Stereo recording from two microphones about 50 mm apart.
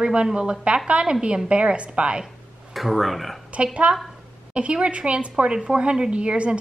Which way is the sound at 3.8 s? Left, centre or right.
Right.